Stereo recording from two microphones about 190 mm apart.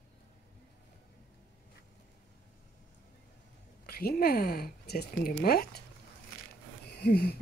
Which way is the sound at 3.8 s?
50° left (ahead or behind).